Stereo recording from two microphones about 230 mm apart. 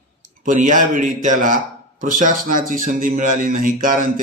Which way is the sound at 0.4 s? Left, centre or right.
Right.